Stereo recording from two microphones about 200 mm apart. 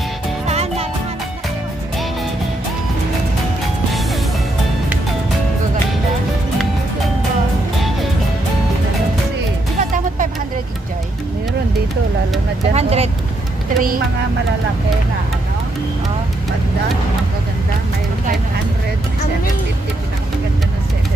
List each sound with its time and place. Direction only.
0.5 s music: 30° right (ahead or behind)
9.8 s music: 40° right (ahead or behind)
12.7 s vehicle: 30° right (ahead or behind)
13.7 s vehicle: 45° right (ahead or behind)